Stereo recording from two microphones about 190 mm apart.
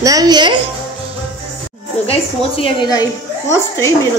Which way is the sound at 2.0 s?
30° left (ahead or behind).